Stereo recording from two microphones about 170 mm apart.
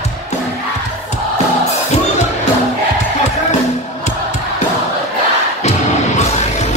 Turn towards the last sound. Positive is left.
turn(degrees=40)  # may be behind; listen again after turning